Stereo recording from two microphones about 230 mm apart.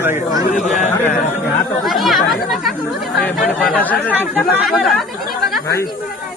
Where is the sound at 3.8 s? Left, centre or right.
Centre.